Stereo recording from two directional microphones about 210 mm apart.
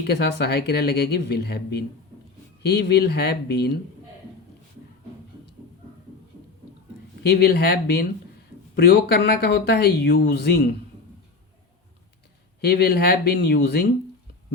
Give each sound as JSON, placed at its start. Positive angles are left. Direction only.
{"t": 0.0, "sound": "speech", "side_deg": 50}
{"t": 7.2, "sound": "speech", "side_deg": 50}
{"t": 12.6, "sound": "speech", "side_deg": 50}